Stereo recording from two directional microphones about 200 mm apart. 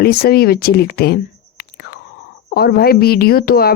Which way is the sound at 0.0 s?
50° left (ahead or behind).